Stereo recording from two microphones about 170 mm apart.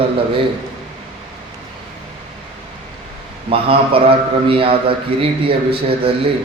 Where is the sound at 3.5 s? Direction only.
35° right (ahead or behind).